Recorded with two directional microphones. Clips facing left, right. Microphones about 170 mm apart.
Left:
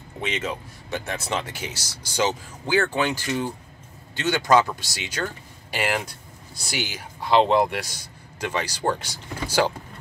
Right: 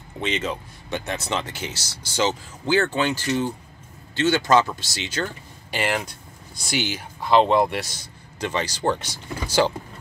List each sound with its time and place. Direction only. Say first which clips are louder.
0.2 s speech: right 2 dB; 5° left (ahead or behind)